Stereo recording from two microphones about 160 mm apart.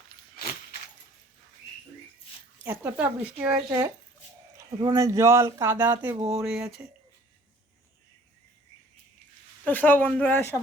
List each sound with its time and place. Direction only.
2.6 s speech: 10° right (ahead or behind)
3.7 s speech: 20° right (ahead or behind); by 6.8 s 5° right (ahead or behind)
9.6 s speech: 10° left (ahead or behind)